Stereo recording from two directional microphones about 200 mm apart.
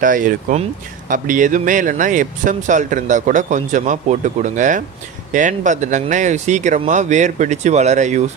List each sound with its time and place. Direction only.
0.0 s speech: 40° right (ahead or behind)